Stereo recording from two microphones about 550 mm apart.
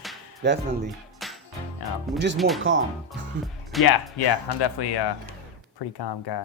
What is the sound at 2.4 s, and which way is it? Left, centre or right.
Speech, centre.